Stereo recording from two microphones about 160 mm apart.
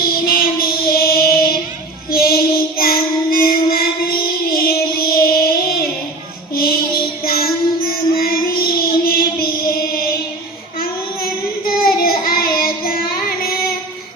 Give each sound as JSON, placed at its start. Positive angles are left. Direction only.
{"t": 0.3, "sound": "music", "side_deg": 70}
{"t": 2.0, "sound": "child singing", "side_deg": 70}
{"t": 11.8, "sound": "child singing", "side_deg": 65}